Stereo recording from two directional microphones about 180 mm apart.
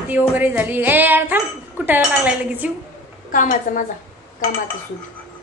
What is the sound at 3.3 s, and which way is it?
Speech, 45° left (ahead or behind).